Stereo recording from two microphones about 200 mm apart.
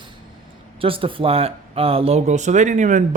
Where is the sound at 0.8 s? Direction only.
25° right (ahead or behind).